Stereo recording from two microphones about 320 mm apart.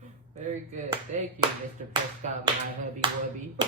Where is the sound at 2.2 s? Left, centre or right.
Right.